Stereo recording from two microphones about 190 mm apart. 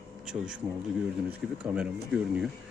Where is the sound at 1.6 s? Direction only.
5° right (ahead or behind).